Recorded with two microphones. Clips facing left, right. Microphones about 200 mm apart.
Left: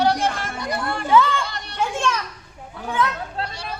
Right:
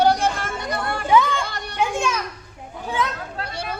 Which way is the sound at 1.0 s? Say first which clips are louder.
Even; 15° right (ahead or behind).